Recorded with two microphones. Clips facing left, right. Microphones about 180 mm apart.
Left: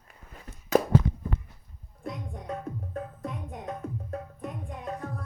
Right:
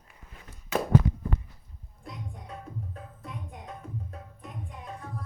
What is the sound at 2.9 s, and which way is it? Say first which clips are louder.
Music: left 7 dB; 55° left (ahead or behind).